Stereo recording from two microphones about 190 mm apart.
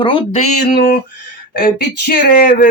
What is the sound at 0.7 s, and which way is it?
Speech, 50° left (ahead or behind).